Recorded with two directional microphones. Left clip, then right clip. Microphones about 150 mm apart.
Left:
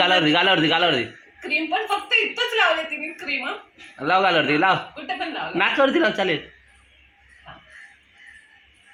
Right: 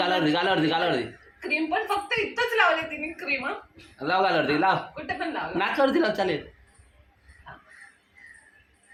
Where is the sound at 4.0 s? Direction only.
45° left (ahead or behind).